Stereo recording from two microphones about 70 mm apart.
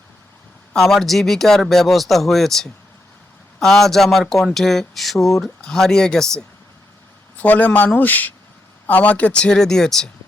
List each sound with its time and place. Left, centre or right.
0.7 s speech: centre
7.3 s a man's voice: left